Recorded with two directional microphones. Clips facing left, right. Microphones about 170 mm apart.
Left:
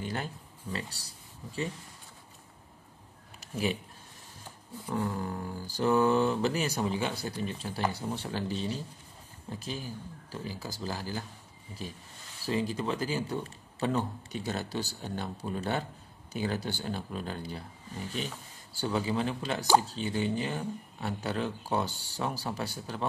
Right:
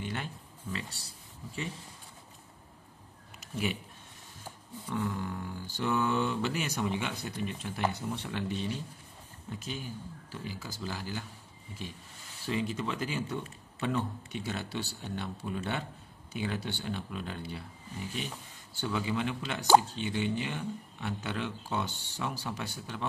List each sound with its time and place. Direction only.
0.0 s speech: 35° left (ahead or behind)
3.3 s a sound: 35° left (ahead or behind)
4.8 s speech: 35° left (ahead or behind)
12.4 s speech: 35° left (ahead or behind)
18.8 s speech: 35° left (ahead or behind)